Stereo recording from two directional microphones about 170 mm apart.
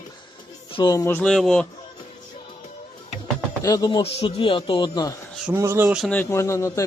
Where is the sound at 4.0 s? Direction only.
35° left (ahead or behind).